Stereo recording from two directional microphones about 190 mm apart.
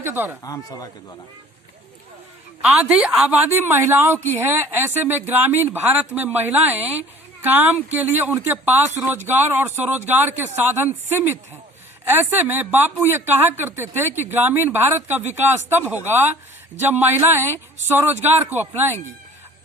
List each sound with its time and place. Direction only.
0.0 s speech: 10° right (ahead or behind)
0.4 s speech: 20° left (ahead or behind)
2.6 s speech: 5° right (ahead or behind)
12.0 s speech: 10° right (ahead or behind)